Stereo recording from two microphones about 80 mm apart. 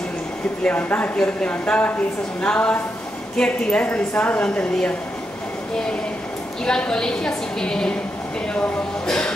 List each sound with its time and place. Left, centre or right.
0.7 s a woman's voice: left
6.6 s a woman's voice: centre
9.0 s a woman's voice: centre